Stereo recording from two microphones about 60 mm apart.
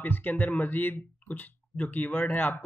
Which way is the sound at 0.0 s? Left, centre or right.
Left.